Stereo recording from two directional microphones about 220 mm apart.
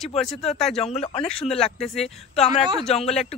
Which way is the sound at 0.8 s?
30° left (ahead or behind).